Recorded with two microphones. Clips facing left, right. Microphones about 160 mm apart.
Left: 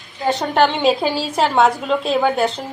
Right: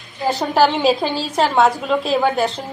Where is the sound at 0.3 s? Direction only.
5° right (ahead or behind).